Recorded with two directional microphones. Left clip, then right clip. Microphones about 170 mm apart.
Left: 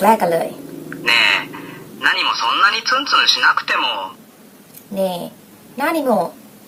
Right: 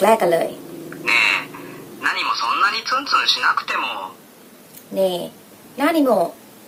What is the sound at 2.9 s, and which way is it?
Speech, 35° left (ahead or behind).